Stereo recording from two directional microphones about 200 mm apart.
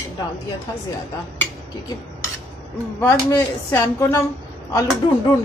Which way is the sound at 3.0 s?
15° left (ahead or behind).